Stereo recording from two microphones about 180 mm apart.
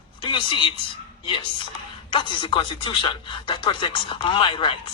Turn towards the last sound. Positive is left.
turn(degrees=25)  # may be behind; listen again after turning